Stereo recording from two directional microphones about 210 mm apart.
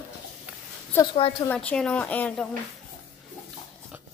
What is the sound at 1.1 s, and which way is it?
Speech, 25° left (ahead or behind).